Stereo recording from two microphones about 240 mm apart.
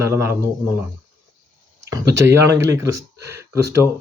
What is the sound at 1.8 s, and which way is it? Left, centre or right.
Speech, centre.